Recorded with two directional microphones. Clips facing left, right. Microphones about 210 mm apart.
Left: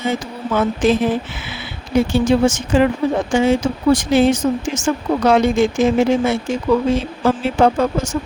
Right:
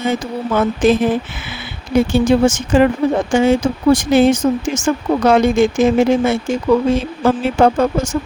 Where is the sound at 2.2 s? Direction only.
50° right (ahead or behind).